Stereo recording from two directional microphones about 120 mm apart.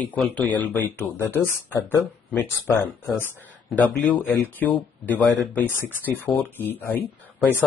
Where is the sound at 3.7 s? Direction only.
Centre (ahead or behind).